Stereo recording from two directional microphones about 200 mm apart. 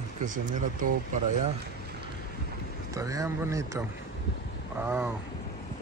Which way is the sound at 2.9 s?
15° right (ahead or behind).